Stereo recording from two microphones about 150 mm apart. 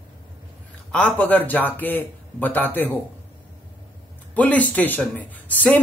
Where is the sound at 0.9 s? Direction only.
10° left (ahead or behind).